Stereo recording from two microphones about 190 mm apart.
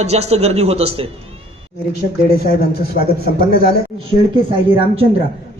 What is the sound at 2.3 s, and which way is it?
A man's voice, 55° left (ahead or behind).